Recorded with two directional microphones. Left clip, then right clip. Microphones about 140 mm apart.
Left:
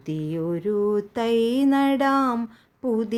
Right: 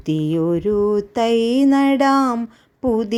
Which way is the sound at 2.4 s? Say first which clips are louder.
Right 6 dB; 30° right (ahead or behind).